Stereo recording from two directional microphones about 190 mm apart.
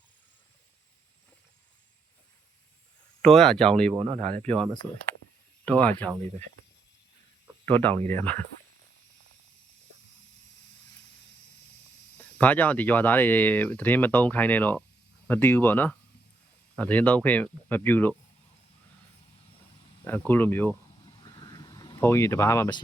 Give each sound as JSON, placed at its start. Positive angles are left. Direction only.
{"t": 3.2, "sound": "speech", "side_deg": 5}
{"t": 3.9, "sound": "speech", "side_deg": -30}
{"t": 4.4, "sound": "speech", "side_deg": 5}
{"t": 7.6, "sound": "speech", "side_deg": 10}
{"t": 12.1, "sound": "speech", "side_deg": 10}
{"t": 20.1, "sound": "speech", "side_deg": 10}
{"t": 21.2, "sound": "vehicle", "side_deg": 20}